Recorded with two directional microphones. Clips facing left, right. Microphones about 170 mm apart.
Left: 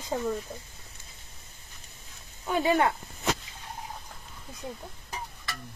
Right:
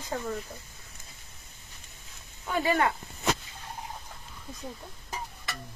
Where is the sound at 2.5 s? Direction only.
20° left (ahead or behind).